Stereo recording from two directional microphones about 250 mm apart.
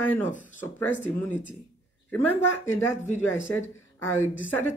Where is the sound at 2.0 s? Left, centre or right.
Centre.